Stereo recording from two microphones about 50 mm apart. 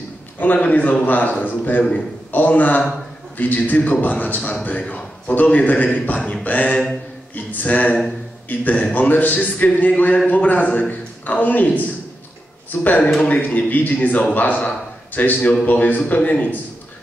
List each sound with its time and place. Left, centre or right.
0.4 s a man's voice: left
12.8 s a man's voice: left